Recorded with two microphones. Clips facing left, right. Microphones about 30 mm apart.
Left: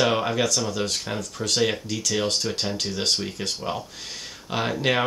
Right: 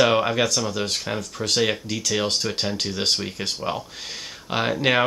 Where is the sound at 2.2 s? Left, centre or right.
Right.